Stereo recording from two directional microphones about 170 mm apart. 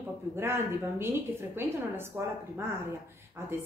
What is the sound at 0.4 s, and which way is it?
Speech, 15° right (ahead or behind).